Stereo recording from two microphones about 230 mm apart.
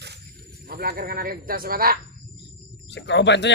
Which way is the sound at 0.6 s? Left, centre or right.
Right.